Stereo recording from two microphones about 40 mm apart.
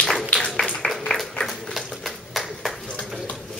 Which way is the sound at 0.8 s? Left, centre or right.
Centre.